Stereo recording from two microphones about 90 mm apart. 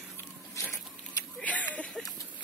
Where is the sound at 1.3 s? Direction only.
15° left (ahead or behind).